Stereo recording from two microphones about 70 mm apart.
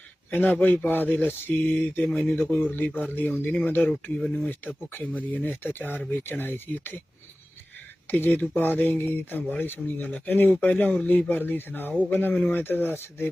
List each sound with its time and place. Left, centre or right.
0.3 s speech: left
2.0 s speech: centre
2.3 s speech: left
8.0 s speech: left